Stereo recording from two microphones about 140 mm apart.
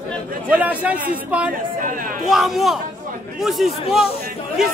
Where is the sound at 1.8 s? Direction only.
70° right (ahead or behind).